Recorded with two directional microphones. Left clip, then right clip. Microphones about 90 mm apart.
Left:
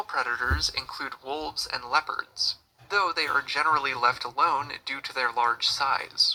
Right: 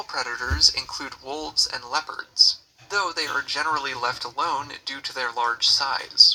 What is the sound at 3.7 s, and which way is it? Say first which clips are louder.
Speech: left 2 dB; 15° right (ahead or behind).